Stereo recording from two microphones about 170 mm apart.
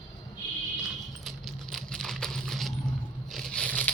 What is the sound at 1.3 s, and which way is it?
Keys jangling, centre (ahead or behind).